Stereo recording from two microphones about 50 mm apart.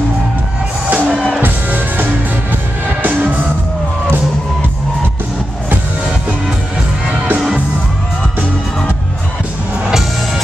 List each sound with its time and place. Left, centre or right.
0.9 s music: centre
1.4 s music: right
9.8 s music: centre